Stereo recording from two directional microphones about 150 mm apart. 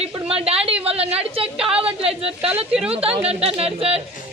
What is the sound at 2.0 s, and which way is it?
A woman's voice, 40° right (ahead or behind).